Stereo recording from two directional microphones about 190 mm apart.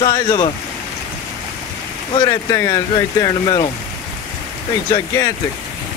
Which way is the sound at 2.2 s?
20° left (ahead or behind).